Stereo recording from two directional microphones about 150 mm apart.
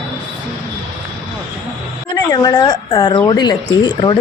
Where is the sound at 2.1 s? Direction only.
25° left (ahead or behind).